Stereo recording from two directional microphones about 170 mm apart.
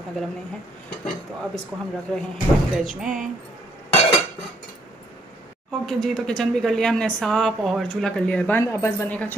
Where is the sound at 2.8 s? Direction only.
Centre (ahead or behind).